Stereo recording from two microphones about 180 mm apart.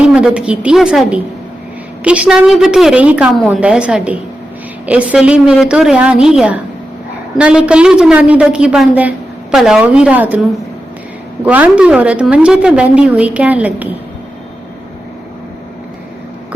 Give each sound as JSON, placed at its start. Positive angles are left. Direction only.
{"t": 0.0, "sound": "a woman's voice", "side_deg": -5}
{"t": 11.4, "sound": "a woman's voice", "side_deg": -5}